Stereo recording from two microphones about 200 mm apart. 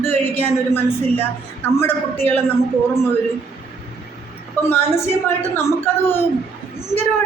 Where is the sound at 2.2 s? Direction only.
10° left (ahead or behind).